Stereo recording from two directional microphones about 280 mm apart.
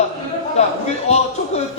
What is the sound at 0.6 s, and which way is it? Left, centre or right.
Speech, left.